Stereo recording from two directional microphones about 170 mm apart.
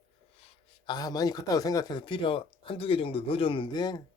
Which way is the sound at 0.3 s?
35° left (ahead or behind).